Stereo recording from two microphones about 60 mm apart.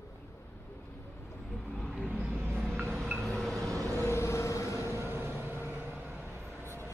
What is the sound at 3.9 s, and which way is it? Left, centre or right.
Vehicle, left.